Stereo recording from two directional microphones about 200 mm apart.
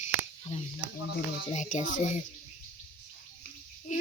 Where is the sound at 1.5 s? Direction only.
35° left (ahead or behind).